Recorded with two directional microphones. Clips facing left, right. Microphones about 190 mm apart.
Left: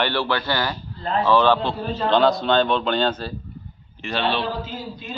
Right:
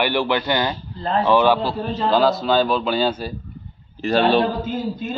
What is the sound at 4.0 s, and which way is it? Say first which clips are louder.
A man's voice: right 7 dB; 40° right (ahead or behind).